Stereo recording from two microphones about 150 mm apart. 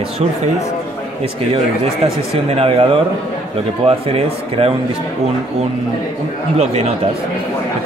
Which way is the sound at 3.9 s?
40° right (ahead or behind).